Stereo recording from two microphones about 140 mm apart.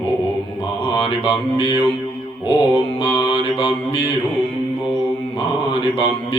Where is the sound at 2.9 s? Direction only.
40° left (ahead or behind).